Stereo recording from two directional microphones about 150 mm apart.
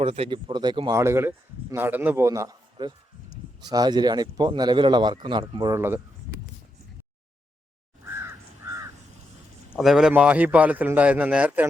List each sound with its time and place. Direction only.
0.0 s a man's voice: 40° right (ahead or behind)
5.7 s a man's voice: 15° right (ahead or behind)
8.0 s crow: 20° right (ahead or behind)
9.7 s a man's voice: 5° right (ahead or behind)